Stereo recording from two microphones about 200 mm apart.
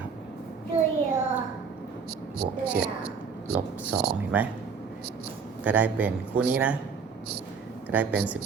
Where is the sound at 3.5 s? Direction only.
55° right (ahead or behind).